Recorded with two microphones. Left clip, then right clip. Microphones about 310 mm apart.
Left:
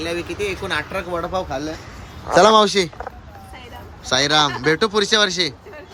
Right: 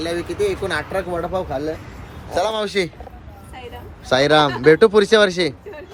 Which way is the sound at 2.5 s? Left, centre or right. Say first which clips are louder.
Left 7 dB; centre.